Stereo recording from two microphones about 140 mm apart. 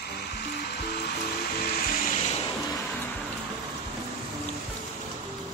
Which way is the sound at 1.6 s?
90° left.